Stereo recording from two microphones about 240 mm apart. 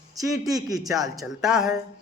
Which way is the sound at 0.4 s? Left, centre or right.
Centre.